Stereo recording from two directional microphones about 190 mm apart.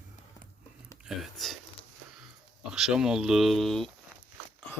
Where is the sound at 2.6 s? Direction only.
5° right (ahead or behind).